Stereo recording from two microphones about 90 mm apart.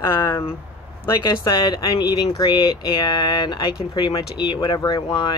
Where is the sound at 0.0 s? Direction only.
30° left (ahead or behind).